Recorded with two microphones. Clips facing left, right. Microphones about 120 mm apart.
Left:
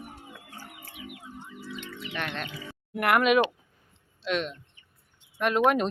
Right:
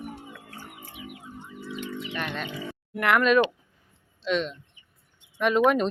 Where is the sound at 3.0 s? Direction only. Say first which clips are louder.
Right 1 dB; 5° left (ahead or behind).